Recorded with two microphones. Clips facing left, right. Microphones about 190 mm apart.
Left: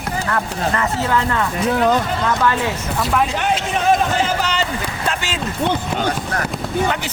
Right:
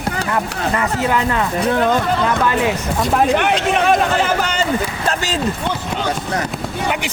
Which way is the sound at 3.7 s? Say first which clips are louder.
Even; 65° right (ahead or behind).